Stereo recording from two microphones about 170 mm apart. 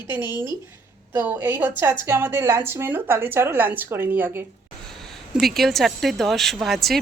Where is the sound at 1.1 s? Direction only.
10° right (ahead or behind).